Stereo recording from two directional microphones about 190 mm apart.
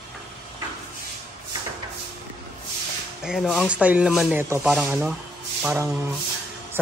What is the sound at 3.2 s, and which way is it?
Speech, centre (ahead or behind).